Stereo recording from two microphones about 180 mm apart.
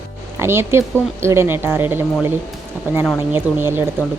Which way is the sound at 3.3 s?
10° right (ahead or behind).